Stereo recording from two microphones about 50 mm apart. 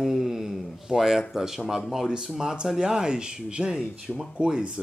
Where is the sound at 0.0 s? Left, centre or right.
Centre.